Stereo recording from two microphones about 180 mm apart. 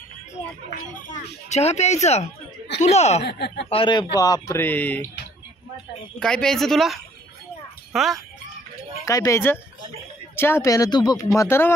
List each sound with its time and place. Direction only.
0.7 s speech: 40° left (ahead or behind)
3.2 s speech: 65° left (ahead or behind)
3.7 s speech: 25° left (ahead or behind); by 5.0 s 10° left (ahead or behind)
6.1 s speech: 5° left (ahead or behind)
9.0 s speech: 20° left (ahead or behind)